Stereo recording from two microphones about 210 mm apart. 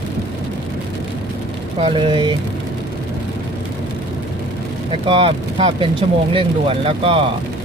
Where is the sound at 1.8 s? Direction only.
25° right (ahead or behind).